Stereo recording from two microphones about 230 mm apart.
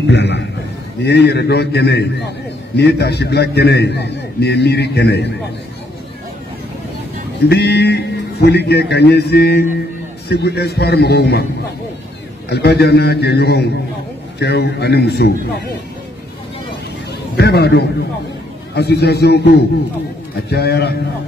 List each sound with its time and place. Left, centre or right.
0.0 s a man's voice: left
7.4 s a man's voice: left
12.4 s a man's voice: left
17.4 s a man's voice: left